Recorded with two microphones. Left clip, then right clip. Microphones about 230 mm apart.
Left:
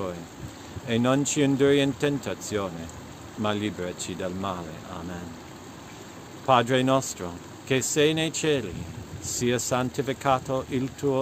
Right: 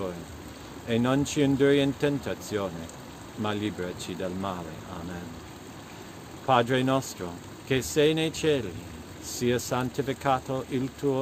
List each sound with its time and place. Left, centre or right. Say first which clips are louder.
0.8 s speech: left 2 dB; centre
6.4 s speech: left 2 dB; left